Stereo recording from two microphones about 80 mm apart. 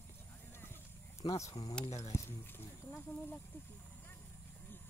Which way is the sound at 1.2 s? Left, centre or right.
Left.